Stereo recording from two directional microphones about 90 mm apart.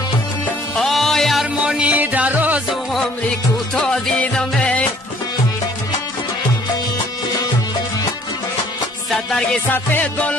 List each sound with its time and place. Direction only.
0.7 s music: 5° left (ahead or behind); by 2.6 s 20° right (ahead or behind)
2.7 s music: centre (ahead or behind)
9.1 s music: 10° left (ahead or behind)
9.7 s music: 20° left (ahead or behind)